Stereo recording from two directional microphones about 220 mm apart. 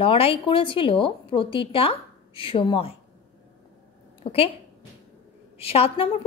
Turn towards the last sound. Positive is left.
turn(degrees=25)  # may be behind; listen again after turning